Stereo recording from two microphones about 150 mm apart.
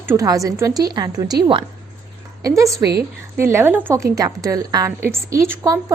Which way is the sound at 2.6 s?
20° right (ahead or behind).